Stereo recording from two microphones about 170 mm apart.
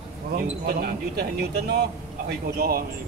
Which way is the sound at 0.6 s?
65° right (ahead or behind).